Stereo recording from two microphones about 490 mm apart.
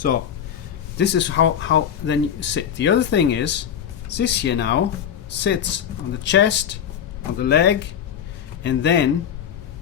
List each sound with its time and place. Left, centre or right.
0.9 s speech: left